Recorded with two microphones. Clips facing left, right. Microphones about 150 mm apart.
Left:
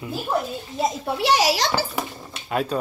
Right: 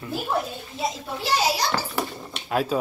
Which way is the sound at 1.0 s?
75° left (ahead or behind).